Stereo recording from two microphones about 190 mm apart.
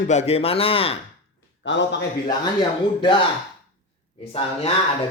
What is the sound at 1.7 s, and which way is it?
Speech, 70° left (ahead or behind).